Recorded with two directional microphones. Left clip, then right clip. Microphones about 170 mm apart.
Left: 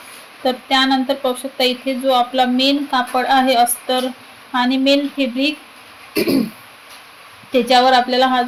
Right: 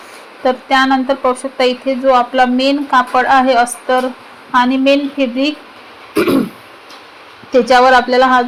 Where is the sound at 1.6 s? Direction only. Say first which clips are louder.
Right 4 dB; 40° right (ahead or behind).